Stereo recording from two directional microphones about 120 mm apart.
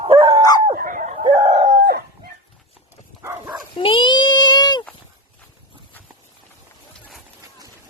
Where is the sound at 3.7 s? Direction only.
45° left (ahead or behind).